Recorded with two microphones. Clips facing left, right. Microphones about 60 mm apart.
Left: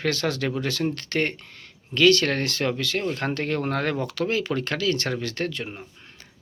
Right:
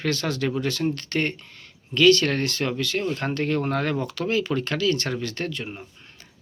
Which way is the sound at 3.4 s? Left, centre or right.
Left.